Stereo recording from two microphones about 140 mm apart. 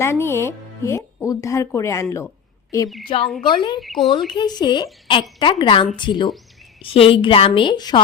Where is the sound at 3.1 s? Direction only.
40° left (ahead or behind).